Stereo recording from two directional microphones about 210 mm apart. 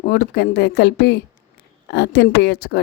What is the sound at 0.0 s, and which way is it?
A woman's voice, 50° left (ahead or behind).